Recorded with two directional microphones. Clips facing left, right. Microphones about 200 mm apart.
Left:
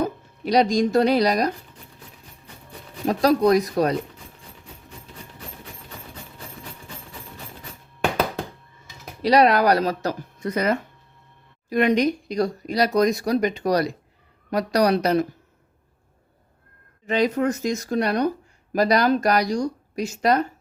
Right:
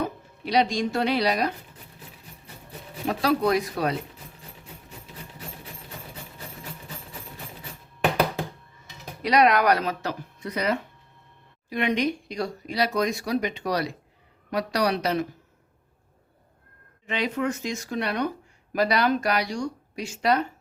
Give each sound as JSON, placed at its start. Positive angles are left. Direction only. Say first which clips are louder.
{"t": 0.0, "sound": "speech", "louder": "left 4 dB", "side_deg": 45}
{"t": 3.1, "sound": "speech", "louder": "left 5 dB", "side_deg": 40}
{"t": 4.9, "sound": "rub", "louder": "left 2 dB", "side_deg": -5}
{"t": 9.2, "sound": "speech", "louder": "left 3 dB", "side_deg": 35}
{"t": 17.1, "sound": "speech", "louder": "left 6 dB", "side_deg": 40}